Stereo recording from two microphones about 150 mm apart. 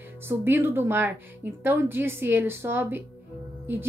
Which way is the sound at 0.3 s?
15° right (ahead or behind).